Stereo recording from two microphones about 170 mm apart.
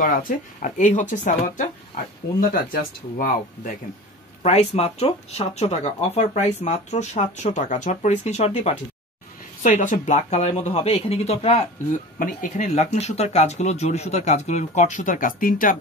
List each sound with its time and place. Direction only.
0.6 s speech: 50° left (ahead or behind)
2.5 s speech: 55° left (ahead or behind)
4.4 s speech: 40° left (ahead or behind)
12.2 s speech: 50° left (ahead or behind)